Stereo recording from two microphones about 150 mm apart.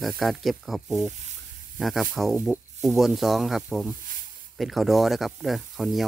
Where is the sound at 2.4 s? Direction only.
10° right (ahead or behind).